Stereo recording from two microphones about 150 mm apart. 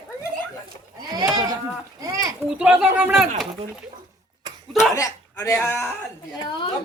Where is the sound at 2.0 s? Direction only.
20° right (ahead or behind).